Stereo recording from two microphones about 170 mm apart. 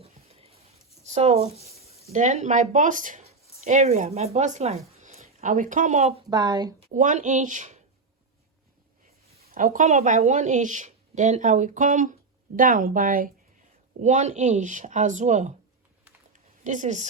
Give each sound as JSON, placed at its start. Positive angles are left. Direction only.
{"t": 0.0, "sound": "a sound", "side_deg": -35}
{"t": 1.0, "sound": "speech", "side_deg": -40}
{"t": 6.3, "sound": "speech", "side_deg": -25}
{"t": 6.7, "sound": "speech", "side_deg": -45}
{"t": 9.5, "sound": "speech", "side_deg": -55}
{"t": 14.0, "sound": "speech", "side_deg": -45}
{"t": 16.3, "sound": "a sound", "side_deg": -45}